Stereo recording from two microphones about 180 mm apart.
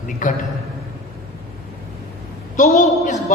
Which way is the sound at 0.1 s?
45° left (ahead or behind).